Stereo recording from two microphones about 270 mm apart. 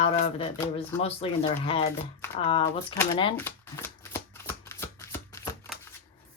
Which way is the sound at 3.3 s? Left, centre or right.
Centre.